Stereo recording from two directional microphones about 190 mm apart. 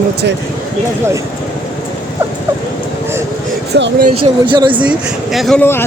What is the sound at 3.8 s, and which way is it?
Speech, 70° right (ahead or behind).